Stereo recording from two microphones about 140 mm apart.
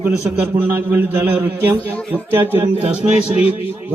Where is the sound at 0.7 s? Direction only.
15° right (ahead or behind).